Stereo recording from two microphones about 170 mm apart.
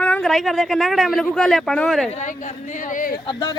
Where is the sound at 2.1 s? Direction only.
45° left (ahead or behind).